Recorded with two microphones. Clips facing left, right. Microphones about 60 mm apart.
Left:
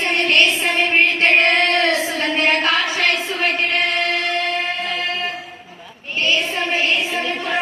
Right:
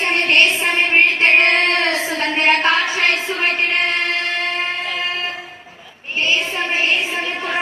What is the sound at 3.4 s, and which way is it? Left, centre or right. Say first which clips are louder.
Music: even; right.